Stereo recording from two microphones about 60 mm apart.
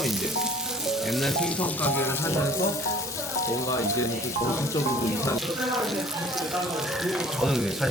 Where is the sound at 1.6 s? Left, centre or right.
Left.